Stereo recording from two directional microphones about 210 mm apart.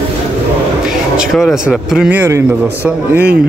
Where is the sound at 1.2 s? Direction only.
Centre (ahead or behind).